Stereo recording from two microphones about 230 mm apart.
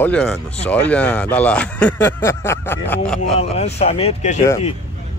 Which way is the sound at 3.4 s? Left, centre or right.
Left.